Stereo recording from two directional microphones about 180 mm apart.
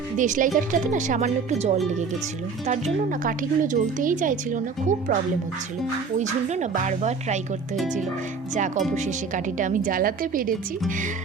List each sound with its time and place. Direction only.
0.2 s speech: 45° right (ahead or behind)
6.1 s speech: 40° right (ahead or behind)
8.5 s speech: 45° right (ahead or behind)